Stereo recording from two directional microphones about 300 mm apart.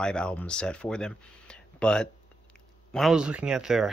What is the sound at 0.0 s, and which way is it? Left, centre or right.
Speech, centre.